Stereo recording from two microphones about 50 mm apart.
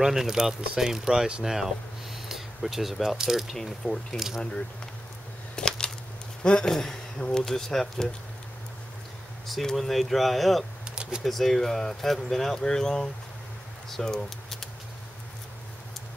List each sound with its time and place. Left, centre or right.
0.0 s speech: centre
3.5 s speech: centre
4.4 s speech: left
5.6 s a sound: centre
6.4 s speech: centre
7.2 s speech: left
7.4 s speech: centre
9.5 s speech: centre
11.0 s a sound: centre
11.2 s speech: centre
13.8 s typing: centre